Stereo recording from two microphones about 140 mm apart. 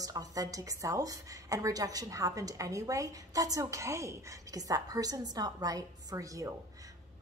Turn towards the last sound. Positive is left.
turn(degrees=-25)  # may be behind; listen again after turning